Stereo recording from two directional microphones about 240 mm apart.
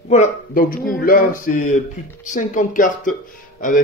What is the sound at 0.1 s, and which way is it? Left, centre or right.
Speech, left.